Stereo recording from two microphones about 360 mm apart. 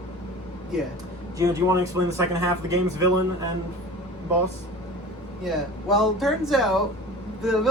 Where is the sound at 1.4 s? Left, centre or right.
Centre.